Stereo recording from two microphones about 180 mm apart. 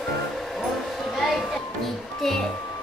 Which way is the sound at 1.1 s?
Centre (ahead or behind).